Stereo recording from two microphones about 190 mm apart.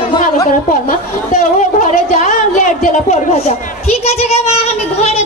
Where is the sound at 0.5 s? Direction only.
40° left (ahead or behind).